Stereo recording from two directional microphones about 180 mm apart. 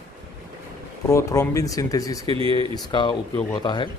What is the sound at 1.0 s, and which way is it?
Speech, 15° left (ahead or behind).